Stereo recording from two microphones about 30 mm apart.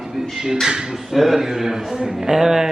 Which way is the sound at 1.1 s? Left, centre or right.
Centre.